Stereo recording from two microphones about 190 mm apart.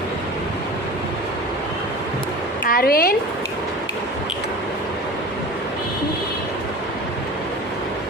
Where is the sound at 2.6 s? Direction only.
50° left (ahead or behind).